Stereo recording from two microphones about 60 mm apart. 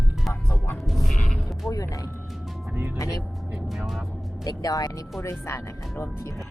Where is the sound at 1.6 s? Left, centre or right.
Left.